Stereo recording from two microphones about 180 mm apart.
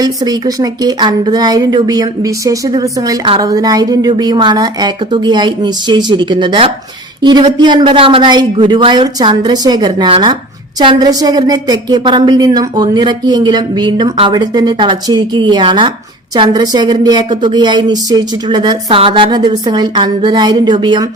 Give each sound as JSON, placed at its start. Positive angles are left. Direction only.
{"t": 0.0, "sound": "a woman's voice", "side_deg": -20}